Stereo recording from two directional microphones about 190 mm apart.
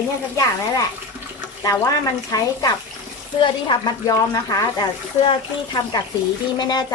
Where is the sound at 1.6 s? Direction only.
15° left (ahead or behind).